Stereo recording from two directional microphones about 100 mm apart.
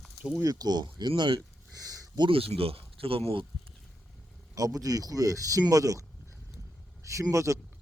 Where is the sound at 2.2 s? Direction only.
65° right (ahead or behind).